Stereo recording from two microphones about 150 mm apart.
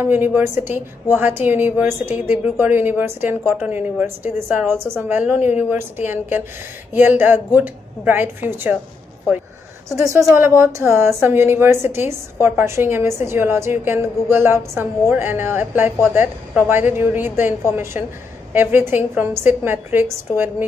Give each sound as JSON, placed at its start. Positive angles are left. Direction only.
{"t": 0.0, "sound": "speech", "side_deg": -15}
{"t": 9.8, "sound": "speech", "side_deg": -20}